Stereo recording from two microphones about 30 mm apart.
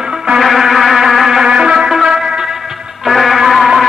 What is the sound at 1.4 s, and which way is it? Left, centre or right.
Music, right.